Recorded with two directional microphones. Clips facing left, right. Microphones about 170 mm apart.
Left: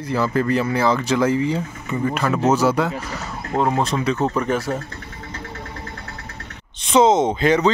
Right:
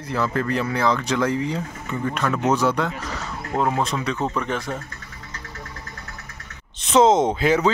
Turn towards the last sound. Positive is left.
turn(degrees=-5)  # may be behind; listen again after turning